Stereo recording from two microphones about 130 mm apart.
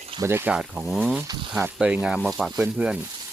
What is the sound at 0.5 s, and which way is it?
Speech, 10° right (ahead or behind).